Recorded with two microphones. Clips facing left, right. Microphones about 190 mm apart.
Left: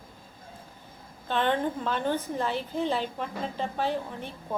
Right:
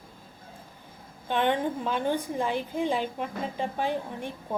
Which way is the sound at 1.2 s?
15° right (ahead or behind).